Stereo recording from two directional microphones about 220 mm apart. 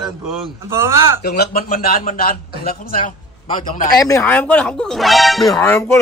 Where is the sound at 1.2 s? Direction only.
45° left (ahead or behind).